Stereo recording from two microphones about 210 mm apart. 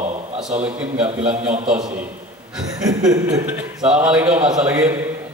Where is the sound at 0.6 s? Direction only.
5° right (ahead or behind).